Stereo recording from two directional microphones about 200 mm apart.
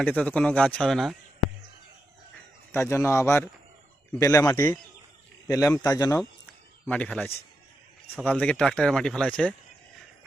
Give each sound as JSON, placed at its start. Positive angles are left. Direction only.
{"t": 0.0, "sound": "speech", "side_deg": 5}
{"t": 2.7, "sound": "speech", "side_deg": 10}